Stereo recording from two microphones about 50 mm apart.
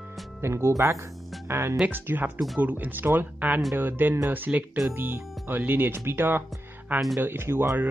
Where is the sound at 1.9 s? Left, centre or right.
Right.